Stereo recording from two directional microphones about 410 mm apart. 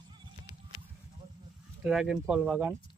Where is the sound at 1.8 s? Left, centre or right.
Centre.